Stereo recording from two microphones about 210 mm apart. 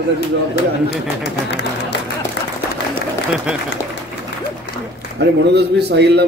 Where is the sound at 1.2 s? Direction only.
55° left (ahead or behind).